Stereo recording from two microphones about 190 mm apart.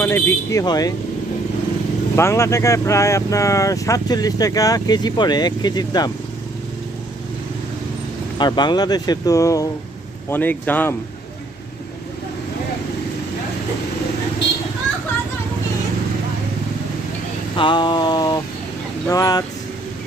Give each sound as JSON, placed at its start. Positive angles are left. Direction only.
{"t": 0.0, "sound": "speech", "side_deg": 10}
{"t": 2.1, "sound": "speech", "side_deg": 15}
{"t": 8.4, "sound": "speech", "side_deg": 25}
{"t": 17.6, "sound": "speech", "side_deg": 25}